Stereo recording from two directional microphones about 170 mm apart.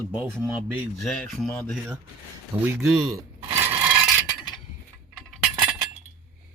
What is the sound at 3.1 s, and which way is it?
Coin, 15° right (ahead or behind).